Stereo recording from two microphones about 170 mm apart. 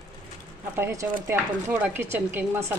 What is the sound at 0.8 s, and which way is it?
Speech, 15° right (ahead or behind).